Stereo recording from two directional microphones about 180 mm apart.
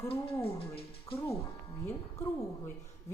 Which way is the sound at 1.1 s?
15° left (ahead or behind).